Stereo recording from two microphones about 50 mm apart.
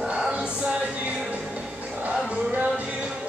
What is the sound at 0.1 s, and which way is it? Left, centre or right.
A capella, right.